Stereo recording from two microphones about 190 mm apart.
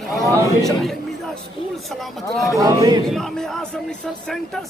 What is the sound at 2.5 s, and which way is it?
Speech, 20° right (ahead or behind).